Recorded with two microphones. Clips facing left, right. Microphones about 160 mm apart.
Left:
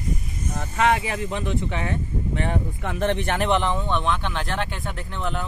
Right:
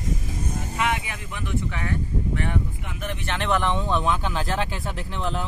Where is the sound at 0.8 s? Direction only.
35° left (ahead or behind).